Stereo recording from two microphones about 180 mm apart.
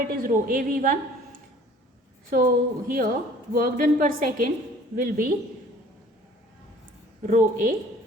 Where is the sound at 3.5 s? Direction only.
50° right (ahead or behind).